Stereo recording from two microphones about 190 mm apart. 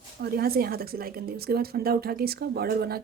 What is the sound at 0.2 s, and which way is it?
A woman's voice, 55° right (ahead or behind).